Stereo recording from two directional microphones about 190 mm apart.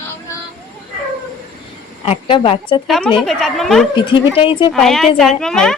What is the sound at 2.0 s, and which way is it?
Speech, 25° left (ahead or behind).